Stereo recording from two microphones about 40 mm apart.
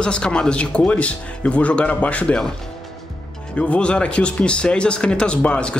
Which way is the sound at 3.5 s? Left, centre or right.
Left.